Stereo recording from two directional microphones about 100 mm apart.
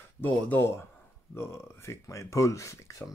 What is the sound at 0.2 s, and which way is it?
Speech, 20° left (ahead or behind).